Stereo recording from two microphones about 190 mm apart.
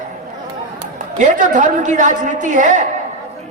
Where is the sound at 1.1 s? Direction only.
40° right (ahead or behind).